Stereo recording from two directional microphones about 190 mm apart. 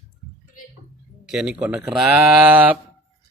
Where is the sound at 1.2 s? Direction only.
5° right (ahead or behind).